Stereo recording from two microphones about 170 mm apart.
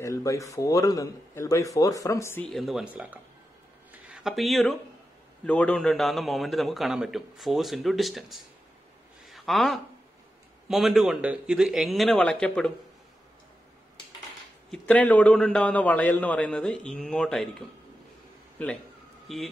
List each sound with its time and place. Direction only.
0.0 s a man's voice: 20° left (ahead or behind)
2.4 s a man's voice: centre (ahead or behind)
3.9 s a sound: 5° right (ahead or behind)
5.4 s a man's voice: 10° left (ahead or behind)
9.2 s a sound: centre (ahead or behind)
10.7 s a man's voice: centre (ahead or behind)
14.7 s a man's voice: 10° left (ahead or behind)